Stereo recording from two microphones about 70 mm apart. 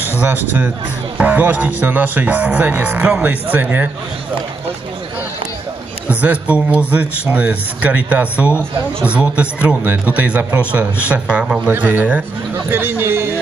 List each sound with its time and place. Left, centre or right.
0.2 s a man's voice: right
6.0 s a man's voice: right